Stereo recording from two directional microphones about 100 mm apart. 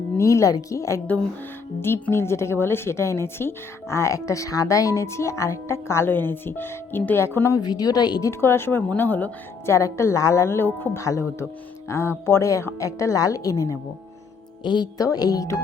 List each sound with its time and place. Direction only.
0.2 s a woman's voice: 30° left (ahead or behind)
7.6 s speech: 40° left (ahead or behind)
8.3 s a woman's voice: 25° left (ahead or behind)
9.7 s a woman's voice: 30° left (ahead or behind)
14.6 s a woman's voice: 45° left (ahead or behind)